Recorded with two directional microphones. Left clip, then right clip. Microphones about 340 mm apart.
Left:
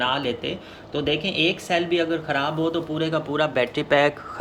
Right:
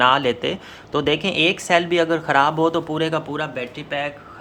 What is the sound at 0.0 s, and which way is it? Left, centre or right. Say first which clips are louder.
Speech: right 7 dB; centre.